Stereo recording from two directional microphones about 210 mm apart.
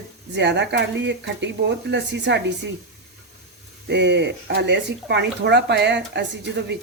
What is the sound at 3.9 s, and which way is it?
Speech, 55° right (ahead or behind).